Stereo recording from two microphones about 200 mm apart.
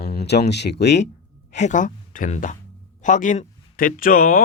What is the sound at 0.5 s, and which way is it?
Speech, 55° left (ahead or behind).